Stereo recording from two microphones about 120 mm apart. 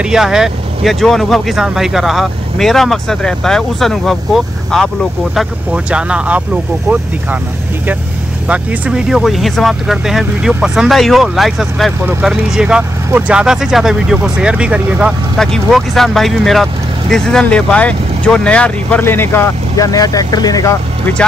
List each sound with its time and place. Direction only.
0.0 s speech: 5° right (ahead or behind)
8.5 s speech: 10° right (ahead or behind)
15.3 s speech: 5° left (ahead or behind); by 20.7 s 30° left (ahead or behind)